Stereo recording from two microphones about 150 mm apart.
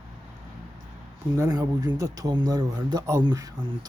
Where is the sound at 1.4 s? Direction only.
25° right (ahead or behind).